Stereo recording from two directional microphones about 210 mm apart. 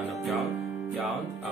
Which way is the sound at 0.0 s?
Centre (ahead or behind).